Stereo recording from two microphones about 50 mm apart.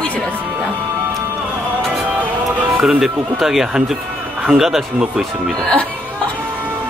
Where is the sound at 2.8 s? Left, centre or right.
Centre.